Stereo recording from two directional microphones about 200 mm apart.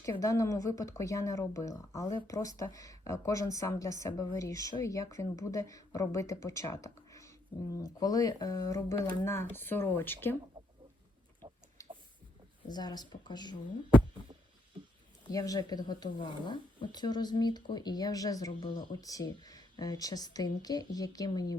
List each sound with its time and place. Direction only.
0.0 s speech: 15° left (ahead or behind)
11.8 s a sound: 15° left (ahead or behind)
12.6 s speech: 20° left (ahead or behind)
15.3 s speech: 20° left (ahead or behind)